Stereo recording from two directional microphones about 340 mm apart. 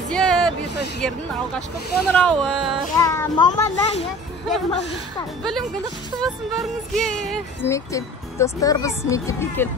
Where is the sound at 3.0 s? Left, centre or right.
Centre.